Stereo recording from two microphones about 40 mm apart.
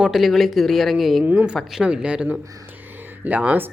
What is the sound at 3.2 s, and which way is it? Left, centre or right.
Speech, right.